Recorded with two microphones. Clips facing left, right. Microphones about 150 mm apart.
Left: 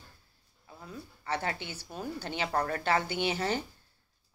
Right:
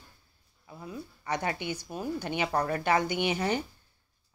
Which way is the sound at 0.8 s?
15° right (ahead or behind).